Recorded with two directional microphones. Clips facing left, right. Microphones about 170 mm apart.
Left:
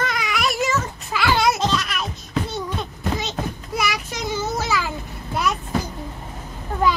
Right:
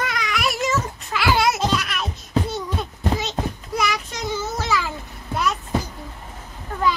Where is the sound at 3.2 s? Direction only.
Centre (ahead or behind).